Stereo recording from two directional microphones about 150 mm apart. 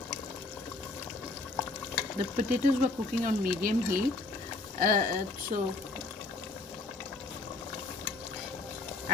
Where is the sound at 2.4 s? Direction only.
55° right (ahead or behind).